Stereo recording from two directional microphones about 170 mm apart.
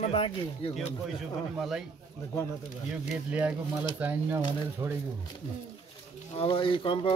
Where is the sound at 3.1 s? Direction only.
10° right (ahead or behind).